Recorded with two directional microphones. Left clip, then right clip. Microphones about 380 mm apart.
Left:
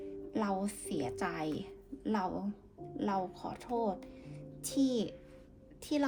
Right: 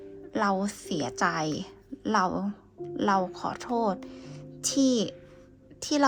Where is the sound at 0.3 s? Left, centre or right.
Right.